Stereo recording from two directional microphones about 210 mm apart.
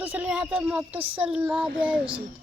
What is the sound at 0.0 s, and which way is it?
Speech, 10° right (ahead or behind).